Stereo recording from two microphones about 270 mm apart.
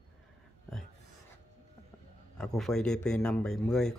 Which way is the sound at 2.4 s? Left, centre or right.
Centre.